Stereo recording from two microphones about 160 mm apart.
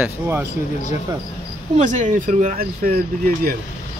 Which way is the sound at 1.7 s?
50° right (ahead or behind).